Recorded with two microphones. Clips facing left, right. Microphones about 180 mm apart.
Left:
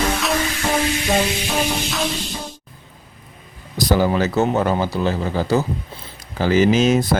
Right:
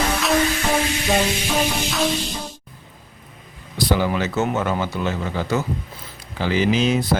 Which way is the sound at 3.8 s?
40° left (ahead or behind).